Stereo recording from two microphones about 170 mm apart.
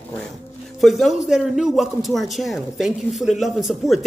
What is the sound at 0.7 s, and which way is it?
A man's voice, centre (ahead or behind).